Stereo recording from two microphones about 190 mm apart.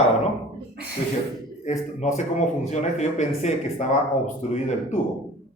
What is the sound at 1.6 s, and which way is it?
Speech, 35° left (ahead or behind).